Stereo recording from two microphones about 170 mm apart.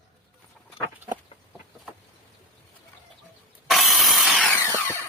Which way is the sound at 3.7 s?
Centre (ahead or behind).